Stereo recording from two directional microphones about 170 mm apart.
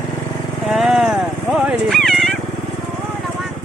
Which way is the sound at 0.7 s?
Centre (ahead or behind).